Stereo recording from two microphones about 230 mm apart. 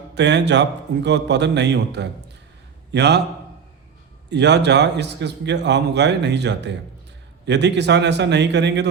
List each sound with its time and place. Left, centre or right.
0.1 s a man's voice: right
4.3 s a man's voice: right